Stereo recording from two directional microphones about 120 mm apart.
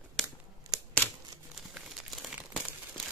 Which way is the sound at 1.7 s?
5° right (ahead or behind).